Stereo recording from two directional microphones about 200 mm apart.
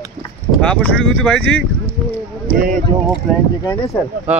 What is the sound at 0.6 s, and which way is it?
Speech, 5° left (ahead or behind).